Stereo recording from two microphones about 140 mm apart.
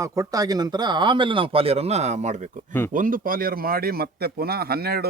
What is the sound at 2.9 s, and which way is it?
Speech, 75° right (ahead or behind).